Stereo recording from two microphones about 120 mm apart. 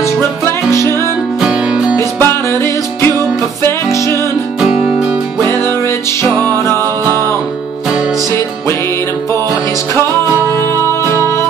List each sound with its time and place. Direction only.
0.0 s music: 25° left (ahead or behind)
1.4 s music: 5° right (ahead or behind)
2.0 s music: 20° left (ahead or behind)
4.6 s music: 5° right (ahead or behind)
5.4 s music: 20° left (ahead or behind)